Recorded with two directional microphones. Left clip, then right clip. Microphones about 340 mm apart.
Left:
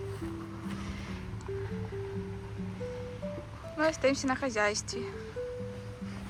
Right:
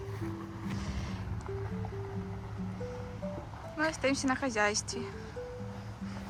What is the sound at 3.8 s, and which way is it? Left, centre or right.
Speech, centre.